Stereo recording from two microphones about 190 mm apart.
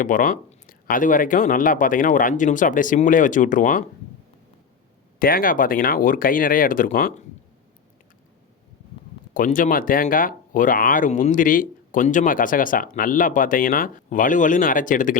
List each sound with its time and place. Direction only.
0.0 s speech: 45° left (ahead or behind)
5.2 s speech: 50° left (ahead or behind)
9.3 s speech: 45° left (ahead or behind)